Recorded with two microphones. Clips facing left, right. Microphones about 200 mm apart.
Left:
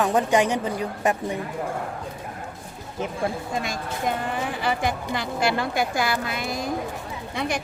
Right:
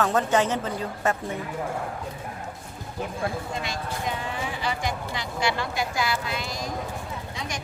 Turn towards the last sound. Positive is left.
turn(degrees=60)  # may be behind; listen again after turning